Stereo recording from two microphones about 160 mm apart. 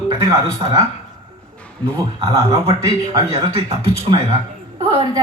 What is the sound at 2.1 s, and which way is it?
Speech, 35° right (ahead or behind).